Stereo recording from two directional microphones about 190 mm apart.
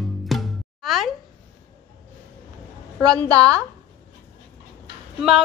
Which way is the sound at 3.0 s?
5° left (ahead or behind).